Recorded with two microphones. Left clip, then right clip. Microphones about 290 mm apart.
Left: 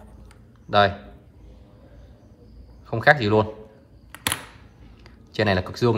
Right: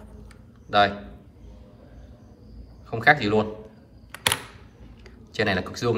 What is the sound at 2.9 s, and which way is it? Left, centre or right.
Speech, centre.